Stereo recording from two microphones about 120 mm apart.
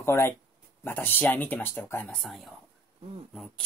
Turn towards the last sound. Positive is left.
turn(degrees=5)  # may be behind; listen again after turning